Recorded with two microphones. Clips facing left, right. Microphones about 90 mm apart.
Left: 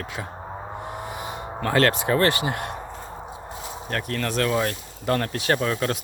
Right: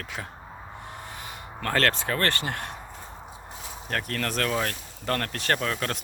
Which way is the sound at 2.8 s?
20° left (ahead or behind).